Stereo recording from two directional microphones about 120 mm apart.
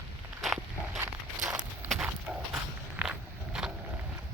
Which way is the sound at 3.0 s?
5° right (ahead or behind).